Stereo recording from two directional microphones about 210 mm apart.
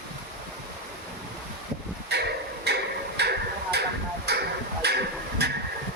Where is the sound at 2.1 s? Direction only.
50° right (ahead or behind).